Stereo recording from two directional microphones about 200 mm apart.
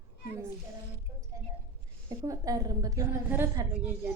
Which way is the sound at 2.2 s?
15° right (ahead or behind).